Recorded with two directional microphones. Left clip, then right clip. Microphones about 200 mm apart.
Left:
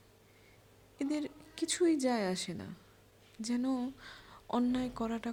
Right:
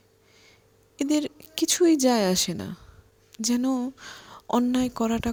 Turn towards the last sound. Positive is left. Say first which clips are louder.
# right 11 dB
turn(degrees=-45)  # may be behind; listen again after turning